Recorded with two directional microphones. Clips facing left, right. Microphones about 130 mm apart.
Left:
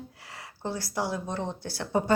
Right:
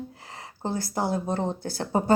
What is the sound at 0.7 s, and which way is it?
Speech, 50° right (ahead or behind).